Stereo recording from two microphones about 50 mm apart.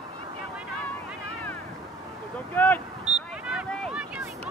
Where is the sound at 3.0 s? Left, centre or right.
Centre.